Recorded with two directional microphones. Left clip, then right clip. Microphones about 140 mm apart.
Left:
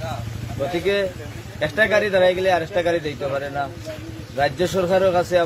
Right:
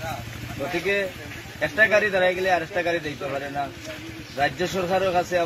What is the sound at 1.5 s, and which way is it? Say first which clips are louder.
Speech: left 1 dB; 25° left (ahead or behind).